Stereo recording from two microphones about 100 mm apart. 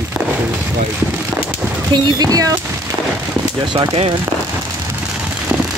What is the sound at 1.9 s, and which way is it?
Speech, 40° right (ahead or behind).